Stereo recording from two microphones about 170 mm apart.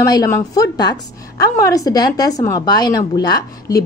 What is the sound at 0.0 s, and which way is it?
A woman's voice, 20° left (ahead or behind).